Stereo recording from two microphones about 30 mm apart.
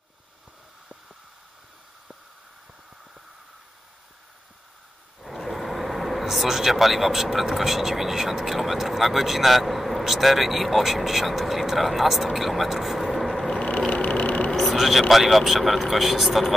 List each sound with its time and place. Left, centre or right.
5.2 s speech: centre
12.6 s vehicle: centre
13.6 s vehicle: left
14.5 s vehicle: centre
14.8 s speech: centre